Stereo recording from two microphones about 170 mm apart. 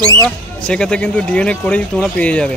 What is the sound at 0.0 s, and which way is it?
Speech, 25° right (ahead or behind).